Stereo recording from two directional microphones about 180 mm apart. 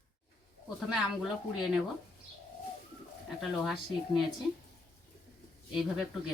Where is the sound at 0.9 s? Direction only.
Centre (ahead or behind).